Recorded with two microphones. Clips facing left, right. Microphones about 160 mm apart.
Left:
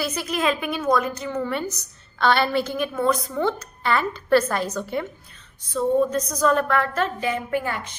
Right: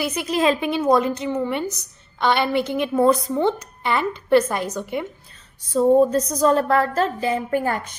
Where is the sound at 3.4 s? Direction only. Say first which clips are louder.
Right 3 dB; 20° right (ahead or behind).